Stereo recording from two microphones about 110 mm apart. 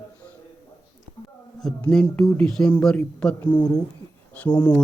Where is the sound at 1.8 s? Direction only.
10° left (ahead or behind).